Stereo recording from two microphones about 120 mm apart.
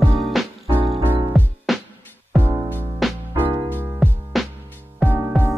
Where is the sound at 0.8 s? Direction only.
50° right (ahead or behind).